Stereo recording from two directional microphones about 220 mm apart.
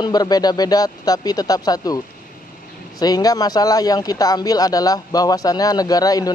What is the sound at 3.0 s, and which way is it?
Speech, 15° left (ahead or behind).